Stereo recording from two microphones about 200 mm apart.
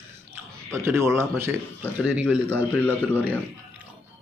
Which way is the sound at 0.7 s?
10° right (ahead or behind).